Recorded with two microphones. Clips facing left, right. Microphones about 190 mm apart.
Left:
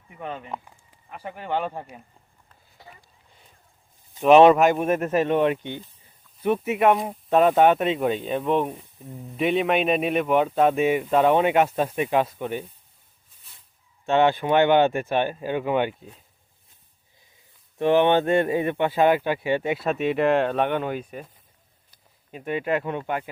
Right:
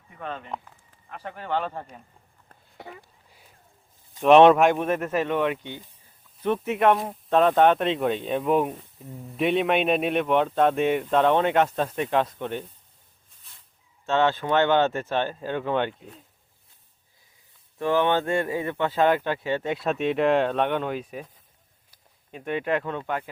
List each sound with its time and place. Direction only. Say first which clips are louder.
0.2 s speech: left 1 dB; 15° left (ahead or behind)
2.5 s a sound: right 7 dB; 65° right (ahead or behind)
4.1 s speech: left 1 dB; 5° left (ahead or behind)
4.9 s speech: left 3 dB; 20° left (ahead or behind)
6.4 s speech: left 1 dB; 10° left (ahead or behind)
14.0 s speech: left 3 dB; 15° left (ahead or behind)
17.7 s speech: left 4 dB; 20° left (ahead or behind)